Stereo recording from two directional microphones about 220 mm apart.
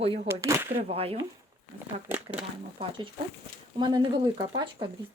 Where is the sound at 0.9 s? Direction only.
25° right (ahead or behind).